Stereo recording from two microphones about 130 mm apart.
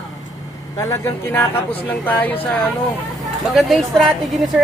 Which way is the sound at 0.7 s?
25° left (ahead or behind).